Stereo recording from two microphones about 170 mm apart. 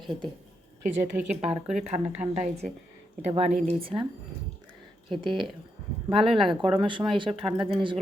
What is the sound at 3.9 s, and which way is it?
Speech, 20° right (ahead or behind).